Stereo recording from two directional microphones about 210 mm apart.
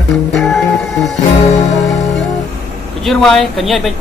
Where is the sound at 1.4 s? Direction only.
35° left (ahead or behind).